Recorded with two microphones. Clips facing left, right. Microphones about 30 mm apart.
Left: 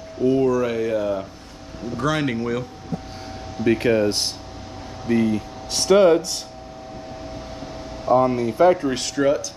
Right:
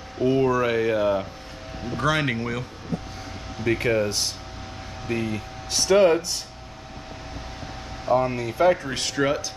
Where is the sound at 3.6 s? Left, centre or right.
Centre.